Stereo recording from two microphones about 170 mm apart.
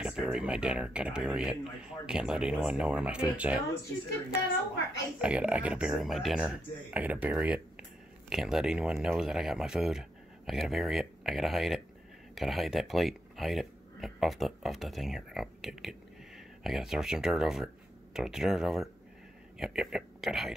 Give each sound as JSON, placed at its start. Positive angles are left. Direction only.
{"t": 0.0, "sound": "speech", "side_deg": -5}
{"t": 5.2, "sound": "speech", "side_deg": -5}